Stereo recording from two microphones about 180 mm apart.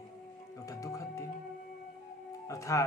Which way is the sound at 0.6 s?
20° left (ahead or behind).